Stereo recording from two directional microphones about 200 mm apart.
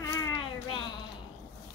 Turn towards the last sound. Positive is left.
turn(degrees=25)  # may be behind; listen again after turning